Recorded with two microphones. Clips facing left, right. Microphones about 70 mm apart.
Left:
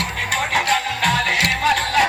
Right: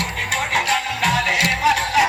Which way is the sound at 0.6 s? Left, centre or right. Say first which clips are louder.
Left 1 dB; centre.